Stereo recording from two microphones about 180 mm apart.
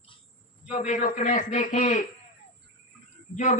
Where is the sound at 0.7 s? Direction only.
45° left (ahead or behind).